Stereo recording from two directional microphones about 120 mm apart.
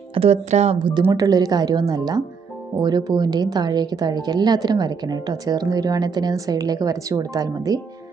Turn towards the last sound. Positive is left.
turn(degrees=-30)  # may be behind; listen again after turning